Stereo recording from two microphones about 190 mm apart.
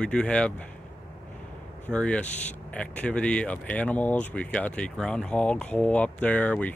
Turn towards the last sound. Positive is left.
turn(degrees=5)  # may be behind; listen again after turning